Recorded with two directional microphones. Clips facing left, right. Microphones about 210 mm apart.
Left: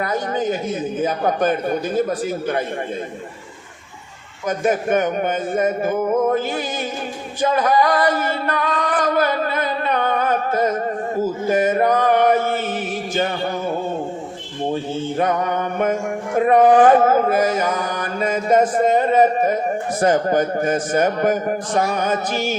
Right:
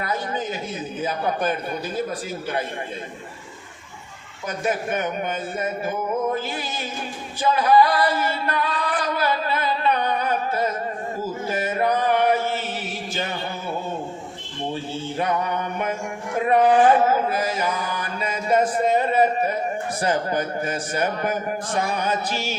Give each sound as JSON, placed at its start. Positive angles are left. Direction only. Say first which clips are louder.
{"t": 0.0, "sound": "mantra", "louder": "left 6 dB", "side_deg": 50}
{"t": 4.4, "sound": "mantra", "louder": "left 6 dB", "side_deg": 50}
{"t": 7.5, "sound": "singing", "louder": "even", "side_deg": 50}
{"t": 11.2, "sound": "speech", "louder": "left 9 dB", "side_deg": 50}
{"t": 15.2, "sound": "mantra", "louder": "left 3 dB", "side_deg": 45}